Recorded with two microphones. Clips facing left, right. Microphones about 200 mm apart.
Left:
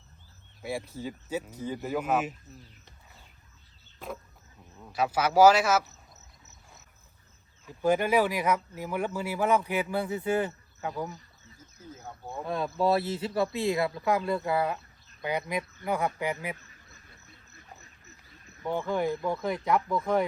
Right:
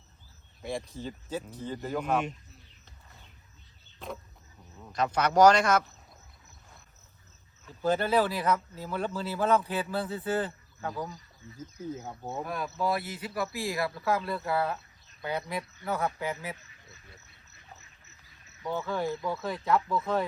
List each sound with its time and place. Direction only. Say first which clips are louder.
0.6 s speech: left 1 dB; 5° left (ahead or behind)
4.8 s speech: left 1 dB; 5° left (ahead or behind)
7.6 s speech: left 2 dB; 10° left (ahead or behind)
11.9 s speech: right 3 dB; 20° right (ahead or behind)
12.5 s speech: left 6 dB; 30° left (ahead or behind)
18.7 s speech: left 3 dB; 15° left (ahead or behind)